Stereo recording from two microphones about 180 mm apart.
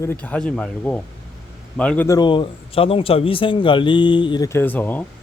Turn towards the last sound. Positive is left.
turn(degrees=10)  # may be behind; listen again after turning